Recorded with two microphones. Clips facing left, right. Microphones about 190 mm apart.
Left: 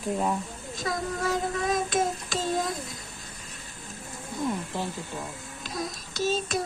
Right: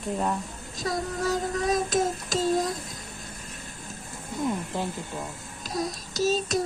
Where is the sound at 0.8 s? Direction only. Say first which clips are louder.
Right 1 dB; 40° right (ahead or behind).